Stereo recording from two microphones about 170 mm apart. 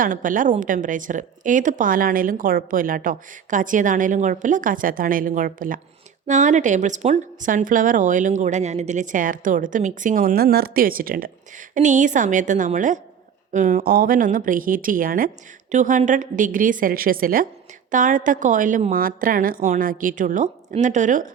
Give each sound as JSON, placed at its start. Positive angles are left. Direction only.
{"t": 0.0, "sound": "speech", "side_deg": -50}